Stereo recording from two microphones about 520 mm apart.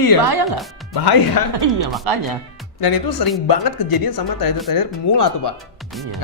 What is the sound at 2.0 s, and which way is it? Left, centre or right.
Speech, right.